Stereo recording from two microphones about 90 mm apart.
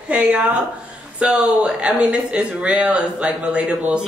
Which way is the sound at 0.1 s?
15° right (ahead or behind).